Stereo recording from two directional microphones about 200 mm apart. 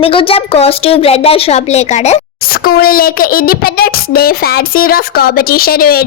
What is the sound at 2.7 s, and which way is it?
Speech, 45° left (ahead or behind).